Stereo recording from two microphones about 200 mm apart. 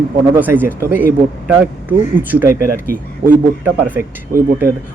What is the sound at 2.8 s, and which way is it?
Speech, 45° right (ahead or behind).